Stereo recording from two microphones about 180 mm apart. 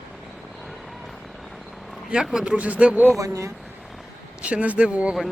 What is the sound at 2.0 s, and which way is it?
Speech, 5° right (ahead or behind).